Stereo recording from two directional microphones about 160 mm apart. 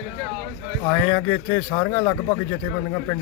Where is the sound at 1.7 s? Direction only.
25° left (ahead or behind).